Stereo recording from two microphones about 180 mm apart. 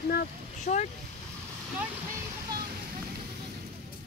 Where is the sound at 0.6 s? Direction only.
40° left (ahead or behind).